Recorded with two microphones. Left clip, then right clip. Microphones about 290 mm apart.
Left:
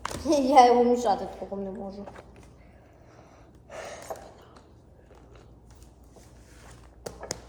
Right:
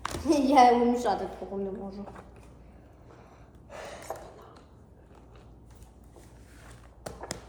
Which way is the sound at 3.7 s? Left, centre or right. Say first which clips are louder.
Left 3 dB; left.